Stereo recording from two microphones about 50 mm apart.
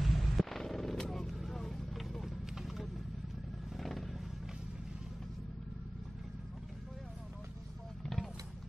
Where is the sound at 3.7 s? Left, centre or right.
Centre.